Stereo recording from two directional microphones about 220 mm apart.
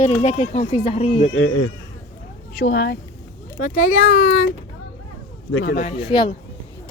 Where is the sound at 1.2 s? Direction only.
70° left (ahead or behind).